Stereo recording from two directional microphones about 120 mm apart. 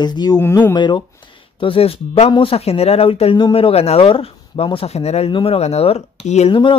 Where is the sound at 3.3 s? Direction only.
45° left (ahead or behind); by 5.3 s 60° left (ahead or behind).